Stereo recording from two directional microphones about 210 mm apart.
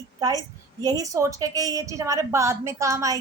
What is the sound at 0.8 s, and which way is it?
A woman's voice, 15° right (ahead or behind).